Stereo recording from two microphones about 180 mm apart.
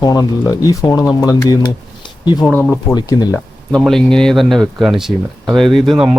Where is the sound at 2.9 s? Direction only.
20° left (ahead or behind).